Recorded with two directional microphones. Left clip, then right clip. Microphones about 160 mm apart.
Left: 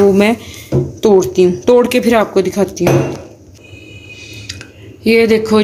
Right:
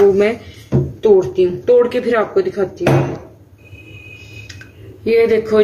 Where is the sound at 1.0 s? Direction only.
70° left (ahead or behind).